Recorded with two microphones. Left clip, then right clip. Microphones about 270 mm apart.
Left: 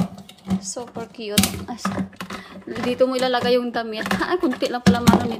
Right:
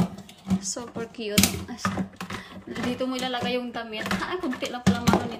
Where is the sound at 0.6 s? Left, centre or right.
Centre.